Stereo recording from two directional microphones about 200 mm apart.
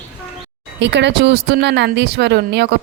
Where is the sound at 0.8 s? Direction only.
60° right (ahead or behind).